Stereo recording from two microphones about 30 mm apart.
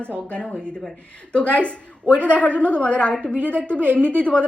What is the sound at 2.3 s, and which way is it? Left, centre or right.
A woman's voice, left.